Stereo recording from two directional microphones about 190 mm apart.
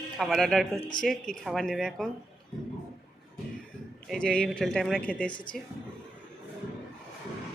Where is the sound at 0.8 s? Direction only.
25° left (ahead or behind).